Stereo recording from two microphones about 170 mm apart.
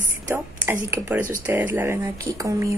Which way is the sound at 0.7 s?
15° right (ahead or behind).